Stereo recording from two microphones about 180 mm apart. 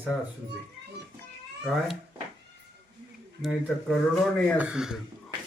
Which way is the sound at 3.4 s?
Centre (ahead or behind).